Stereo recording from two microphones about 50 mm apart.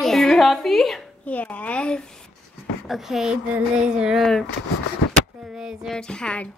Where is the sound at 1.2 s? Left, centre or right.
Left.